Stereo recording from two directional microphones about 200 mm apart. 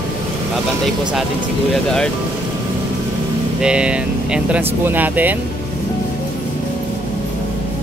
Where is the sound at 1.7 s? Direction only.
Centre (ahead or behind).